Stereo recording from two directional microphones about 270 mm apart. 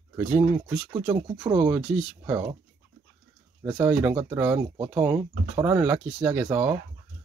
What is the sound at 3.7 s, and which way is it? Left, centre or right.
Speech, centre.